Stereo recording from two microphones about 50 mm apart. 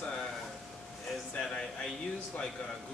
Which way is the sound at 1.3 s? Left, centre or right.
Centre.